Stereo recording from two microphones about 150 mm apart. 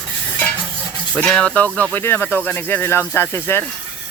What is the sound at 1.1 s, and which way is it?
Speech, 10° left (ahead or behind).